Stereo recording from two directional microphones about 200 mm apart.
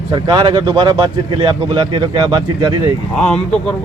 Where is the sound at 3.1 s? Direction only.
5° left (ahead or behind).